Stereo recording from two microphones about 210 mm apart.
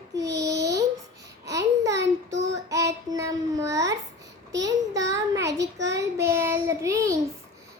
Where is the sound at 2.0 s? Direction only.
55° right (ahead or behind).